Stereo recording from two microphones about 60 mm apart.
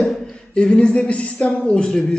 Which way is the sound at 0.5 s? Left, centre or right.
Centre.